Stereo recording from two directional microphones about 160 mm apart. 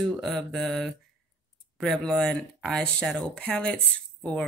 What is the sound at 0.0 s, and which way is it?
Speech, centre (ahead or behind).